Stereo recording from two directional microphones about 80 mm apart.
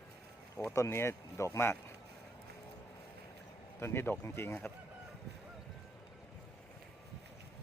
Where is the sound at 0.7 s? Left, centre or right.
Left.